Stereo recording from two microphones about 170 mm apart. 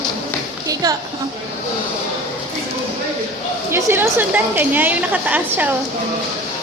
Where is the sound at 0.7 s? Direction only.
20° right (ahead or behind).